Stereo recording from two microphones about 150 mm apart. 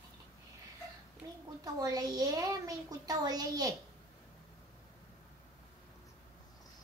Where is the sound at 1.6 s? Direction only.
25° right (ahead or behind).